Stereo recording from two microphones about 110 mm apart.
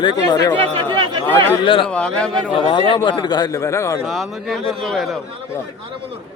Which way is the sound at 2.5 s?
50° left (ahead or behind).